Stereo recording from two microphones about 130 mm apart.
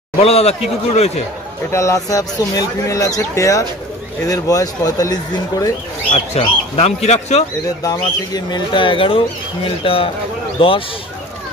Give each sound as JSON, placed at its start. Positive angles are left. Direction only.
{"t": 0.2, "sound": "speech", "side_deg": 50}
{"t": 1.7, "sound": "speech", "side_deg": 25}
{"t": 6.1, "sound": "speech", "side_deg": 50}
{"t": 7.8, "sound": "speech", "side_deg": 30}